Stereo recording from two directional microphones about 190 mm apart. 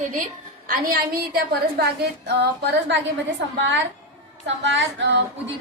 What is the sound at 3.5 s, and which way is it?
A woman's voice, 70° right (ahead or behind).